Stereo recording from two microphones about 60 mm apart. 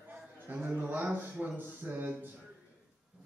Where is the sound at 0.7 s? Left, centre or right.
Right.